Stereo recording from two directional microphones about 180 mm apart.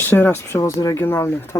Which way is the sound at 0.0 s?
10° left (ahead or behind).